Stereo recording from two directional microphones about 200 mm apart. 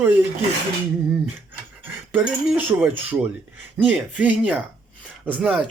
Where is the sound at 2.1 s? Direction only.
10° right (ahead or behind).